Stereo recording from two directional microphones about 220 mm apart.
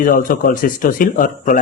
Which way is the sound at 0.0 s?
40° left (ahead or behind).